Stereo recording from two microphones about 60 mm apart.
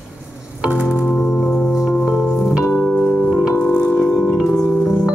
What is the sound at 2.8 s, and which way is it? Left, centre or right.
Organ, centre.